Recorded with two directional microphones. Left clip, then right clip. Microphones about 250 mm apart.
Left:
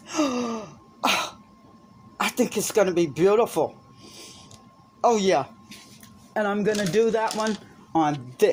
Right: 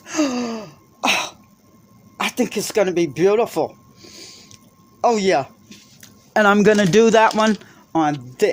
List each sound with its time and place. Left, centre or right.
0.0 s sneeze: right
2.1 s speech: centre
4.9 s speech: right
6.0 s speech: right